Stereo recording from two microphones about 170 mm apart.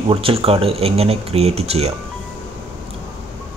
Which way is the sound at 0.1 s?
35° right (ahead or behind).